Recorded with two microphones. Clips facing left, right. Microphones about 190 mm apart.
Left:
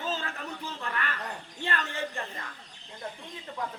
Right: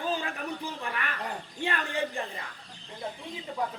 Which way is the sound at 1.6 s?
15° right (ahead or behind).